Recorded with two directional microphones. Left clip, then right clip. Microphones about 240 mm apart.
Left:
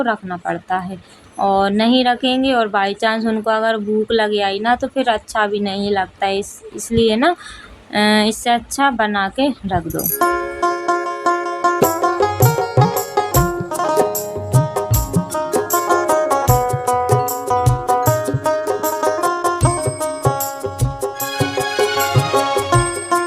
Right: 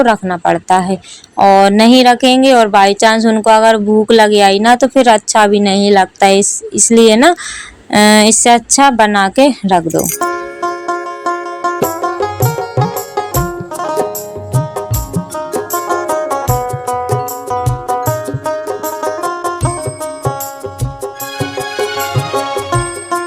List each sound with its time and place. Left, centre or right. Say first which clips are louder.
0.0 s speech: right 9 dB; right
10.2 s music: even; centre